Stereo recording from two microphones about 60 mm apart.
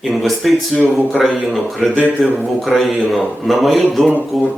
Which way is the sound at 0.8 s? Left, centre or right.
Right.